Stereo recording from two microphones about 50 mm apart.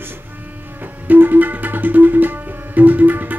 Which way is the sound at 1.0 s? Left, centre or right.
Right.